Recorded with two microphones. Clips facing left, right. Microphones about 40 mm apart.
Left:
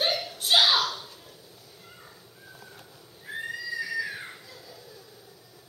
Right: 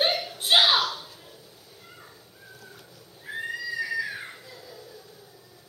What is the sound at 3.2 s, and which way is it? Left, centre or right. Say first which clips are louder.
Neigh: right 2 dB; centre.